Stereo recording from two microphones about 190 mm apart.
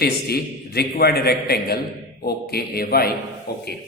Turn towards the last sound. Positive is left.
turn(degrees=55)  # may be behind; listen again after turning